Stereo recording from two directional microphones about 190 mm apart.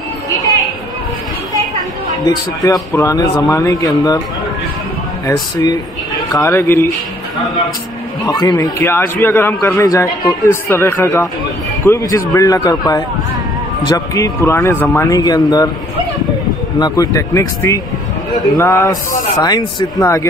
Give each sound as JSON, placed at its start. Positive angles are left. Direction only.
{"t": 2.2, "sound": "a man's voice", "side_deg": 20}
{"t": 5.2, "sound": "a man's voice", "side_deg": 20}
{"t": 8.3, "sound": "a man's voice", "side_deg": 20}
{"t": 16.8, "sound": "a man's voice", "side_deg": 20}